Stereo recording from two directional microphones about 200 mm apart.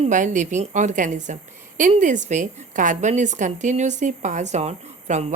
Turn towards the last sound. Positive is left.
turn(degrees=-35)  # may be behind; listen again after turning